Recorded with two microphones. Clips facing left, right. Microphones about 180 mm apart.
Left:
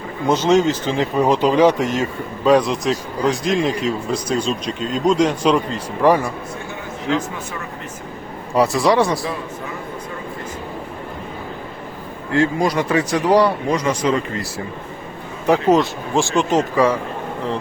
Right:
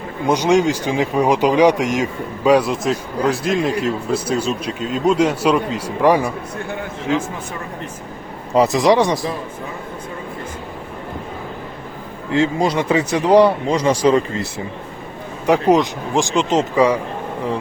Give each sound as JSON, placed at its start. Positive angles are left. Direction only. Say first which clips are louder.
{"t": 0.3, "sound": "speech", "louder": "even", "side_deg": -15}
{"t": 8.5, "sound": "speech", "louder": "right 2 dB", "side_deg": -20}
{"t": 12.3, "sound": "speech", "louder": "even", "side_deg": -20}
{"t": 15.4, "sound": "speech", "louder": "right 1 dB", "side_deg": -15}